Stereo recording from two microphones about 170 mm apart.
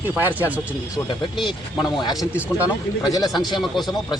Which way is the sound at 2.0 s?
25° left (ahead or behind).